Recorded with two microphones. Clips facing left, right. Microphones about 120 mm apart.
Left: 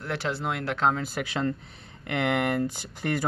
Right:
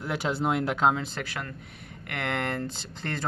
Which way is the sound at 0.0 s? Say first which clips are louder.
Right 2 dB; 15° right (ahead or behind).